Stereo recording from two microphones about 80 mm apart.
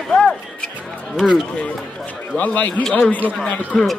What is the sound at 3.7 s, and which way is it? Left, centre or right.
Speech, centre.